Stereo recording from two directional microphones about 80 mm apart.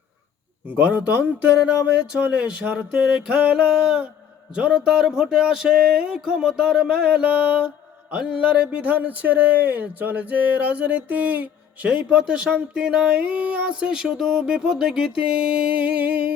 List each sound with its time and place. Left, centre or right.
0.7 s speech: right
2.1 s music: centre
8.1 s speech: centre
12.0 s music: centre